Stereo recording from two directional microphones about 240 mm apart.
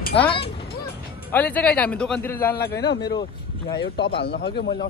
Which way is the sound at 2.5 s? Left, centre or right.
Left.